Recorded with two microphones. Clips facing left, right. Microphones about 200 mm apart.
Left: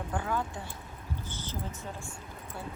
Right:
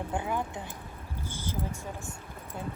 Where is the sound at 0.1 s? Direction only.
20° right (ahead or behind).